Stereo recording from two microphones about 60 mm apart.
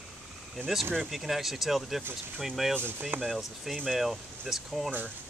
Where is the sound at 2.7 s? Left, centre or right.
Right.